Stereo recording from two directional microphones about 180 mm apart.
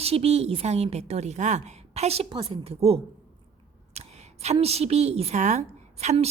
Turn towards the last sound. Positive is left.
turn(degrees=-40)  # may be behind; listen again after turning